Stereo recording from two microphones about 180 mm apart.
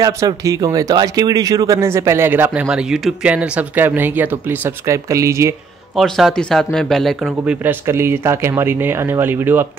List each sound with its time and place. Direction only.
0.0 s speech: 20° right (ahead or behind)
5.9 s speech: centre (ahead or behind)
7.2 s speech: 10° right (ahead or behind)